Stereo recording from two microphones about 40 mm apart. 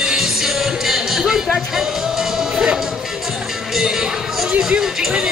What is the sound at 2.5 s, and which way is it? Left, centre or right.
Music, right.